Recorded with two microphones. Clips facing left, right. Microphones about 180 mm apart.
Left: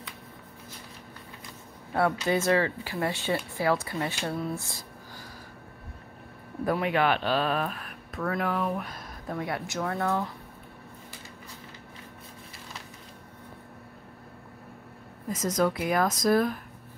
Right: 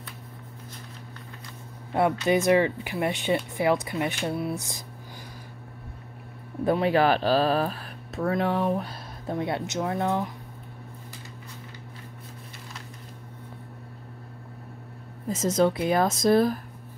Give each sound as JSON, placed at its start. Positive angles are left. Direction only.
{"t": 2.0, "sound": "speech", "side_deg": -20}
{"t": 6.6, "sound": "speech", "side_deg": -30}
{"t": 15.2, "sound": "speech", "side_deg": -25}